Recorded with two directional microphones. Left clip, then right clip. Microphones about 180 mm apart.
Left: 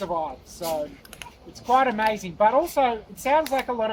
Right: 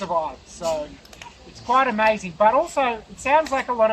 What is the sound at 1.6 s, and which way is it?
Speech, 45° left (ahead or behind).